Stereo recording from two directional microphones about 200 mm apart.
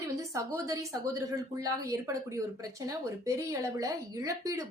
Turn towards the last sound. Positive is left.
turn(degrees=-15)  # may be behind; listen again after turning